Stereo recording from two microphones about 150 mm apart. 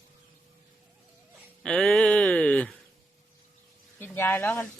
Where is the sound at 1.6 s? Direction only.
5° left (ahead or behind).